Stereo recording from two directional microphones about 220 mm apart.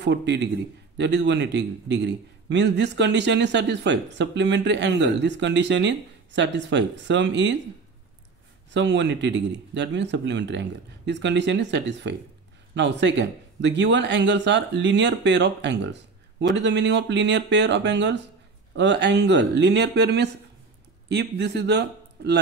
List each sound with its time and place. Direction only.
0.0 s a man's voice: 50° right (ahead or behind)
8.7 s a man's voice: 55° right (ahead or behind)